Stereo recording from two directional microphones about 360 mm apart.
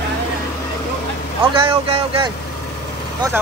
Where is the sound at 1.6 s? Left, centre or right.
Centre.